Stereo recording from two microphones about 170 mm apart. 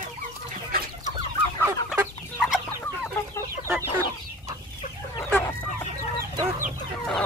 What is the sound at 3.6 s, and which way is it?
Chicken, 15° right (ahead or behind).